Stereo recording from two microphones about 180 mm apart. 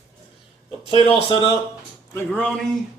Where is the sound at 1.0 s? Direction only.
30° left (ahead or behind).